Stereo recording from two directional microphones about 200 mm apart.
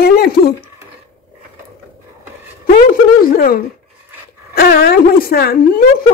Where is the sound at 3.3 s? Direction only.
45° left (ahead or behind).